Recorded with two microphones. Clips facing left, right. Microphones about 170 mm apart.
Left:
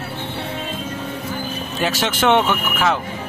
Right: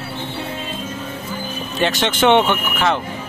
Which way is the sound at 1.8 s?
5° left (ahead or behind).